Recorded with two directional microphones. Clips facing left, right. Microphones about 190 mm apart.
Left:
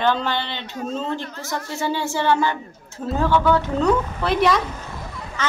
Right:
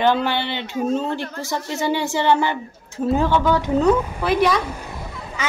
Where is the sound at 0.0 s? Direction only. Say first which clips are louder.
Right 3 dB; 10° right (ahead or behind).